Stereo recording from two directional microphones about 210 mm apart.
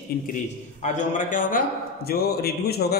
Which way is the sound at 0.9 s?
40° left (ahead or behind).